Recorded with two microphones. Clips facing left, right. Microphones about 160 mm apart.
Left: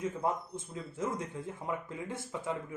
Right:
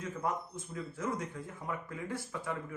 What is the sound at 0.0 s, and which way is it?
Speech, 25° left (ahead or behind).